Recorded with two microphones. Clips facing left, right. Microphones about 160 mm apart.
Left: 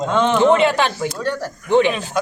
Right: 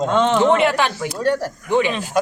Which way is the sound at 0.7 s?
20° left (ahead or behind).